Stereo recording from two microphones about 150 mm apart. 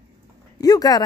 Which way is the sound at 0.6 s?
25° left (ahead or behind).